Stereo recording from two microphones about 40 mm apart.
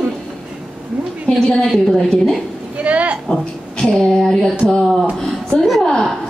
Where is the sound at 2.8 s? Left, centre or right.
Right.